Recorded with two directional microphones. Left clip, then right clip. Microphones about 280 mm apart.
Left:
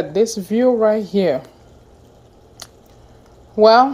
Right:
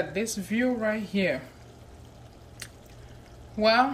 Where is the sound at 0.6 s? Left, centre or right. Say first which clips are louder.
Left 14 dB; left.